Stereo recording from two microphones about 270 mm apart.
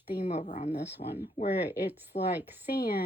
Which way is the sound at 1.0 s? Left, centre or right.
Left.